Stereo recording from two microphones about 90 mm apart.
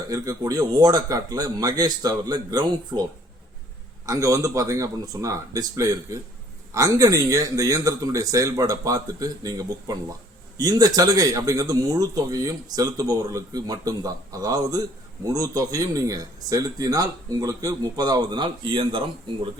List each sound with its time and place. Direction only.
0.1 s speech: 40° right (ahead or behind)
4.0 s a man's voice: 35° right (ahead or behind); by 19.5 s 70° right (ahead or behind)